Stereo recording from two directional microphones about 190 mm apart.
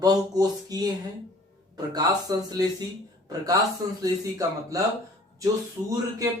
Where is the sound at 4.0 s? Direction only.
15° right (ahead or behind).